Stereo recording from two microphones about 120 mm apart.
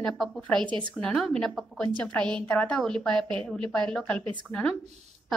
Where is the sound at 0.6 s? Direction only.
40° right (ahead or behind).